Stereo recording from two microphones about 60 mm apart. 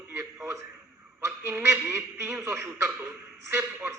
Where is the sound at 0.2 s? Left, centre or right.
Right.